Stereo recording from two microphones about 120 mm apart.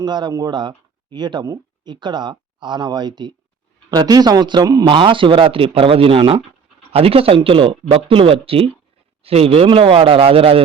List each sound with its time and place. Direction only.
0.0 s speech: 40° right (ahead or behind)
4.9 s speech: 45° right (ahead or behind)